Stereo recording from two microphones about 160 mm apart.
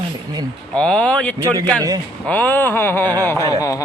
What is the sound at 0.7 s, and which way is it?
Speech, 5° left (ahead or behind).